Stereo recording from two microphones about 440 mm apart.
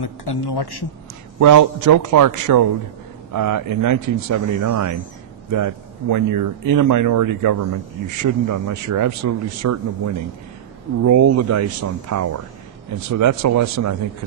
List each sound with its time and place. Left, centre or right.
0.0 s a man's voice: left
1.4 s speech: right